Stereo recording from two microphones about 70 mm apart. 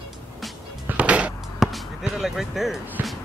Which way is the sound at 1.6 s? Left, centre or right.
Centre.